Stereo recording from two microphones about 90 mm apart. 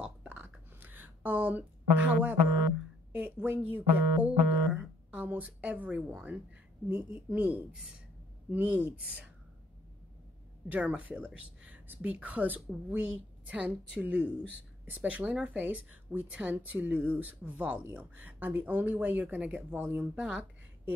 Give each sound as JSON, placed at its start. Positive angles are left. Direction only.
{"t": 0.0, "sound": "a sound", "side_deg": -15}
{"t": 3.1, "sound": "speech", "side_deg": -15}
{"t": 10.7, "sound": "speech", "side_deg": -15}